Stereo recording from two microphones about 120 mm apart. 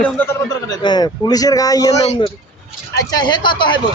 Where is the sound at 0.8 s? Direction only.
35° left (ahead or behind).